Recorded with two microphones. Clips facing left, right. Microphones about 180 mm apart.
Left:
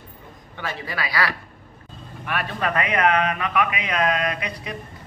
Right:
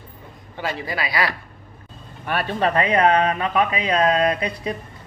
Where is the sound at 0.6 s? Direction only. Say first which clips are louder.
Right 3 dB; 25° right (ahead or behind).